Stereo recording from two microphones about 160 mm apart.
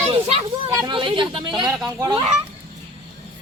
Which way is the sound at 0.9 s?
30° right (ahead or behind).